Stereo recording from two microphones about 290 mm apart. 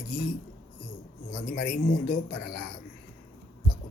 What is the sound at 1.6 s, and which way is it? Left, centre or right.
Speech, left.